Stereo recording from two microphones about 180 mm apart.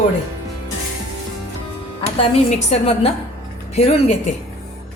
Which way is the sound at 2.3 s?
35° left (ahead or behind).